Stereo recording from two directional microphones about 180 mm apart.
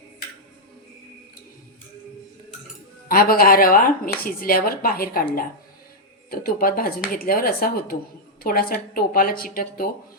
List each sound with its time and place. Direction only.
3.1 s speech: 55° left (ahead or behind)